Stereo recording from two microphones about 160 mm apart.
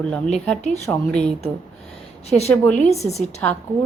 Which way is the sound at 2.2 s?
40° left (ahead or behind).